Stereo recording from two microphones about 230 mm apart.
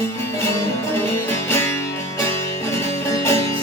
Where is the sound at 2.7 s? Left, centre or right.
Centre.